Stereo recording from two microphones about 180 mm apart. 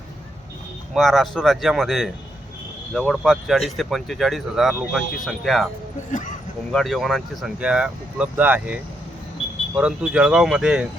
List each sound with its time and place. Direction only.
0.9 s speech: centre (ahead or behind)
6.1 s speech: 45° left (ahead or behind)
6.7 s speech: centre (ahead or behind)